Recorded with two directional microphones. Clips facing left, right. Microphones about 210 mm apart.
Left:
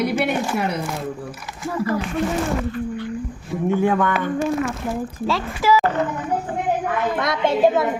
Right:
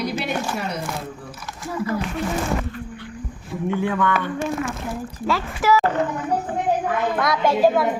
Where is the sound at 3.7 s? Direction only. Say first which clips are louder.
Left 3 dB; 45° left (ahead or behind).